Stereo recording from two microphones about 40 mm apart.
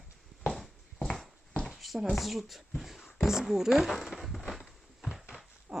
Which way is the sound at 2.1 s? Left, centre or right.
Centre.